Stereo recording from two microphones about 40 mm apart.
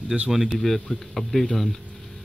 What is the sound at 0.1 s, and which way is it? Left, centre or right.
Speech, centre.